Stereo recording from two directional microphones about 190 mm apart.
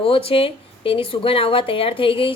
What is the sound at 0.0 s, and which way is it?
Speech, 30° left (ahead or behind).